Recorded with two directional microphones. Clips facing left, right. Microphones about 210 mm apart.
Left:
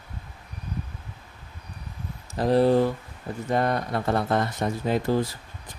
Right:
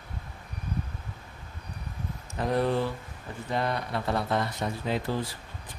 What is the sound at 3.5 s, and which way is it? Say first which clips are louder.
Speech: left 5 dB; 45° left (ahead or behind).